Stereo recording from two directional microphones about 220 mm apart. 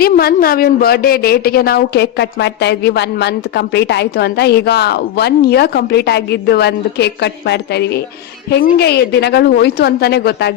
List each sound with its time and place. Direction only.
0.0 s a woman's voice: 45° left (ahead or behind)